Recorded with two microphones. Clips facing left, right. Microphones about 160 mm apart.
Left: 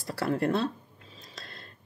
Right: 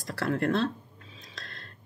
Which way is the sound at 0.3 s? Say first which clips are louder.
Even; 5° left (ahead or behind).